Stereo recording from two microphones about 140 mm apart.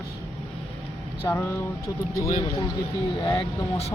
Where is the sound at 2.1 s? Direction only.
25° left (ahead or behind).